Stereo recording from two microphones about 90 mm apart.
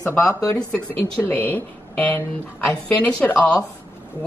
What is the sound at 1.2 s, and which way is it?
A woman's voice, 20° left (ahead or behind).